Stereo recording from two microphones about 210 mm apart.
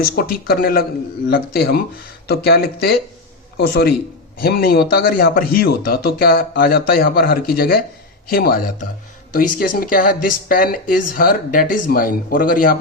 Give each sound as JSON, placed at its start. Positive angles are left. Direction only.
{"t": 0.0, "sound": "speech", "side_deg": 45}
{"t": 4.4, "sound": "speech", "side_deg": 45}